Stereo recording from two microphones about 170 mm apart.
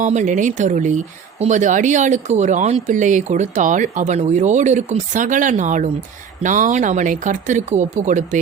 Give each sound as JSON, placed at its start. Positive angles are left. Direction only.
{"t": 0.0, "sound": "speech", "side_deg": -45}